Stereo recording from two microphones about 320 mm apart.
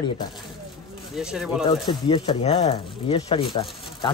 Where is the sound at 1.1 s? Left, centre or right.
Centre.